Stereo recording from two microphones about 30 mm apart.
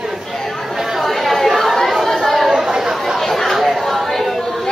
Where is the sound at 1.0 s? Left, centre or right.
Centre.